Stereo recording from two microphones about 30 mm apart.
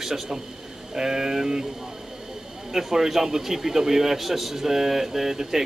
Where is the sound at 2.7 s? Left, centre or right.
Centre.